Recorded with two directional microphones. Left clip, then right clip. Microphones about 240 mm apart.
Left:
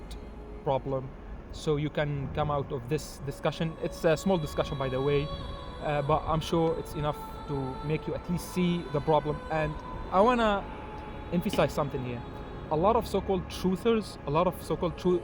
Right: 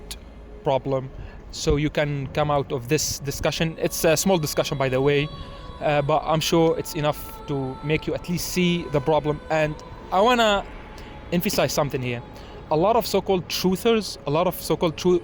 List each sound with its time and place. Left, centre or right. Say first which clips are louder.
0.6 s speech: right 7 dB; right